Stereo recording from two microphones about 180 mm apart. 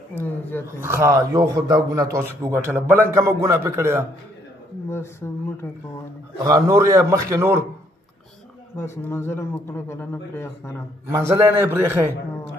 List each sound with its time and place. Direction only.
0.2 s a man's voice: 10° left (ahead or behind)
0.7 s a man's voice: 15° right (ahead or behind)
4.8 s a man's voice: 15° left (ahead or behind)
6.4 s a man's voice: 20° right (ahead or behind)
8.7 s a man's voice: 15° left (ahead or behind)
11.1 s a man's voice: 15° right (ahead or behind)